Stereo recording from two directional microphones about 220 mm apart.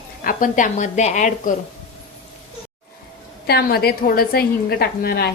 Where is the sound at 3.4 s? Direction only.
45° left (ahead or behind).